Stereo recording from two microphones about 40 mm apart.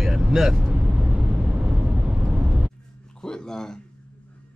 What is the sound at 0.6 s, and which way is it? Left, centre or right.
Vehicle, right.